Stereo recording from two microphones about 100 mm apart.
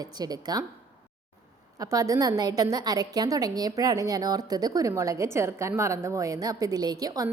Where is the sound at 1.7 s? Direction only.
35° right (ahead or behind).